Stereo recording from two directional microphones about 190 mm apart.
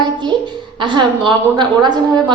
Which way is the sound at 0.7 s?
25° right (ahead or behind).